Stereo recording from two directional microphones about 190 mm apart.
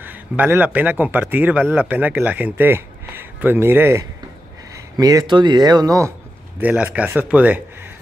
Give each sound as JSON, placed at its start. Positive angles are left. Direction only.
{"t": 0.0, "sound": "speech", "side_deg": -10}